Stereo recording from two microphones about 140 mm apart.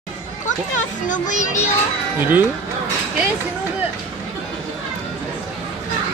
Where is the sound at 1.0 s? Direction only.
65° left (ahead or behind).